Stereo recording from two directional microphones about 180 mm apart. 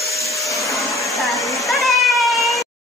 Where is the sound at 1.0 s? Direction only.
Centre (ahead or behind).